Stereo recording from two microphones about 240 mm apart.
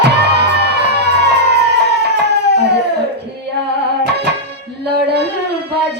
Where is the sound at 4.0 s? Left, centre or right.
Right.